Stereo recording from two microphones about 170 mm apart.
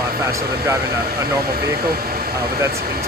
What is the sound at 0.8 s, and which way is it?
Speech, 65° right (ahead or behind).